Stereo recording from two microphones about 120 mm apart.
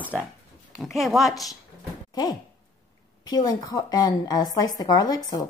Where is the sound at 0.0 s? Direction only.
15° right (ahead or behind).